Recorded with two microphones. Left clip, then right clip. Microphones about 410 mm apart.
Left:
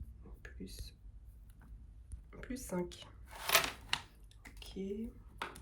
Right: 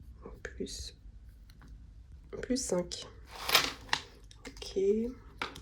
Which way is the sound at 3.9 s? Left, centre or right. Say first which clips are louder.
Right 5 dB; centre.